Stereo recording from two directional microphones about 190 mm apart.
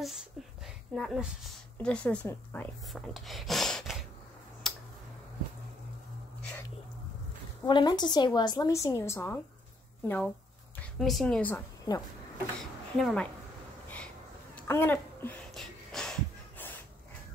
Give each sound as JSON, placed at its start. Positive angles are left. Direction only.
{"t": 0.0, "sound": "a woman's voice", "side_deg": 0}
{"t": 4.6, "sound": "tick-tock", "side_deg": 0}
{"t": 7.6, "sound": "a woman's voice", "side_deg": 25}
{"t": 12.5, "sound": "speech", "side_deg": 5}
{"t": 13.8, "sound": "a sound", "side_deg": 5}